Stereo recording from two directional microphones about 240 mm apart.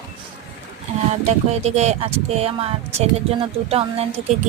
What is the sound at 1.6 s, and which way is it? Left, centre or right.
A woman's voice, right.